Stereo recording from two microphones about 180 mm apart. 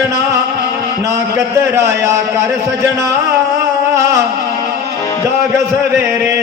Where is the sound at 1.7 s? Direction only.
15° right (ahead or behind).